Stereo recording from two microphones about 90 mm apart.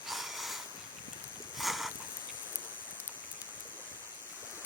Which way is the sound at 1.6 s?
Centre (ahead or behind).